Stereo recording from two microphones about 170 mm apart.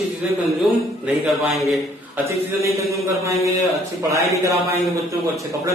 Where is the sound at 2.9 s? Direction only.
15° right (ahead or behind).